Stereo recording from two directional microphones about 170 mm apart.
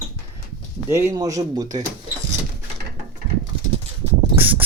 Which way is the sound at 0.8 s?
15° right (ahead or behind).